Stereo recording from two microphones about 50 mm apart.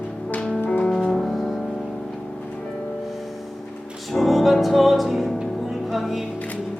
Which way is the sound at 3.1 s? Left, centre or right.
Centre.